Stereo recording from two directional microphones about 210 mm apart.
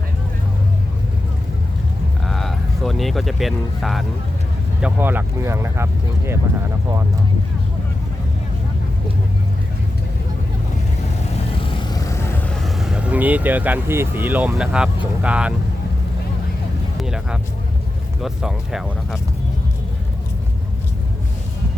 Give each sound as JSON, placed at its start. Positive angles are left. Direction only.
{"t": 2.2, "sound": "a sound", "side_deg": 0}
{"t": 4.8, "sound": "speech", "side_deg": -10}
{"t": 11.6, "sound": "vehicle", "side_deg": 25}
{"t": 12.6, "sound": "speech", "side_deg": 0}
{"t": 17.0, "sound": "speech", "side_deg": -5}